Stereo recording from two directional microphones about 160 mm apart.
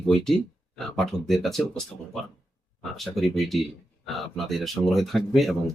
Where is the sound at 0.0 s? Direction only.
5° left (ahead or behind).